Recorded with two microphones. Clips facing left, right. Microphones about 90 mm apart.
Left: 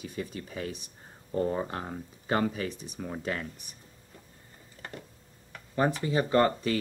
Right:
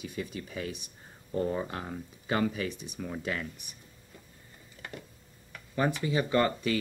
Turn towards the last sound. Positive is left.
turn(degrees=35)  # may be behind; listen again after turning